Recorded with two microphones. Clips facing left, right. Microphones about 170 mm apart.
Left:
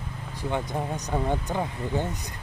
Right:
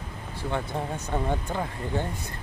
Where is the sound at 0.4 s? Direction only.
15° left (ahead or behind).